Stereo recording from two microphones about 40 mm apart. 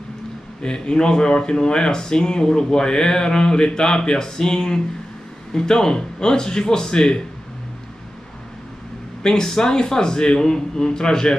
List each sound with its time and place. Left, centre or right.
0.6 s a man's voice: left
9.2 s a man's voice: centre